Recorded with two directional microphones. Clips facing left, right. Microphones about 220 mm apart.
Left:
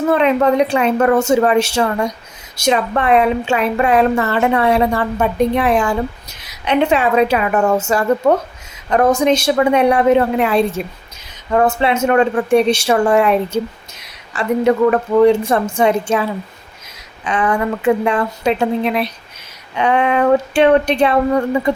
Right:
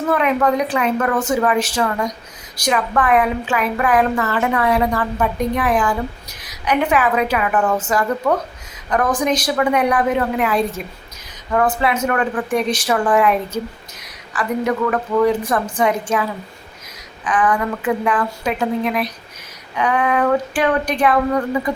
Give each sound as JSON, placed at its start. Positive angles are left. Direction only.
{"t": 0.1, "sound": "a woman's voice", "side_deg": 25}